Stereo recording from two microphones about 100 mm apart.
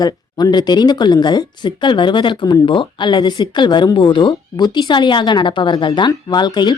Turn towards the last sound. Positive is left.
turn(degrees=45)  # may be behind; listen again after turning